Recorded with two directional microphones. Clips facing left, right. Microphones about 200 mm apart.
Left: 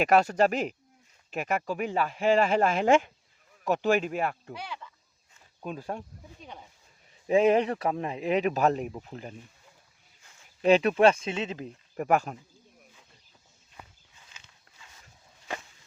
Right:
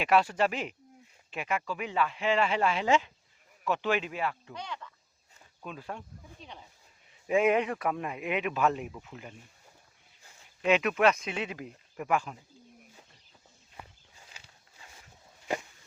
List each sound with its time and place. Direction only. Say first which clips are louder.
0.0 s speech: left 4 dB; 45° left (ahead or behind)
4.5 s speech: left 1 dB; 5° left (ahead or behind)
5.6 s speech: left 5 dB; 40° left (ahead or behind)
10.6 s speech: left 5 dB; 35° left (ahead or behind)
11.9 s speech: left 5 dB; 40° left (ahead or behind)
14.2 s walk: right 2 dB; 35° right (ahead or behind)